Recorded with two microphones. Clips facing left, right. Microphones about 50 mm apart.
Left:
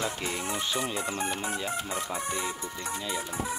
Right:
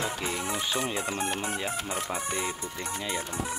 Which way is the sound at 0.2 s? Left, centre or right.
Centre.